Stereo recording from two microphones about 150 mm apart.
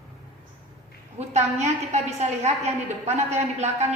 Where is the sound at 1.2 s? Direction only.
50° right (ahead or behind).